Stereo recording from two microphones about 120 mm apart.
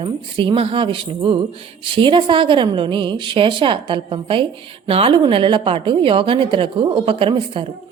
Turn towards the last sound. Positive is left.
turn(degrees=-45)  # may be behind; listen again after turning